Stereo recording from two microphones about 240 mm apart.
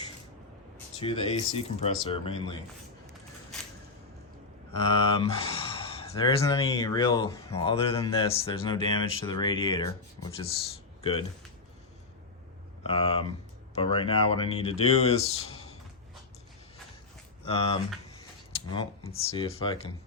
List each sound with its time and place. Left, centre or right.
0.9 s speech: left
4.9 s speech: left
12.8 s speech: left
17.4 s speech: left